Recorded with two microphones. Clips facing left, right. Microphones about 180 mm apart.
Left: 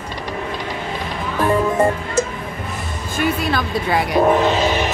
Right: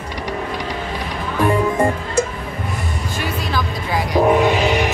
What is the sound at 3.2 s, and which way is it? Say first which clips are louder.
Music: left 5 dB; 60° left (ahead or behind).